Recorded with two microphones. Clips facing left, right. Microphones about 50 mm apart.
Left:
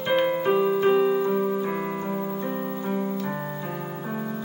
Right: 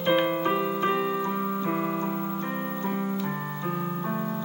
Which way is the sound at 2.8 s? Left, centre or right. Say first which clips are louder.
Left 1 dB; centre.